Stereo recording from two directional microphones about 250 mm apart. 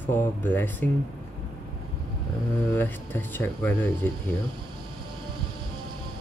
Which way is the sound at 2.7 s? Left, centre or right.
Centre.